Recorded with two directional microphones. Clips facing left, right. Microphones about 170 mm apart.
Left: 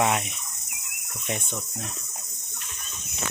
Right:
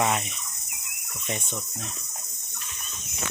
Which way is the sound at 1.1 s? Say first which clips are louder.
Left 1 dB; centre (ahead or behind).